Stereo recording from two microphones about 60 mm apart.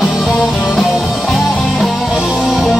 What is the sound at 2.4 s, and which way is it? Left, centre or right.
Music, centre.